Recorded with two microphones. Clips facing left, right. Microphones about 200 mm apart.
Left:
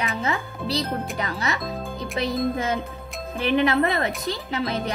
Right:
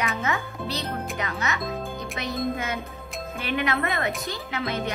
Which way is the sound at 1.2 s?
35° left (ahead or behind).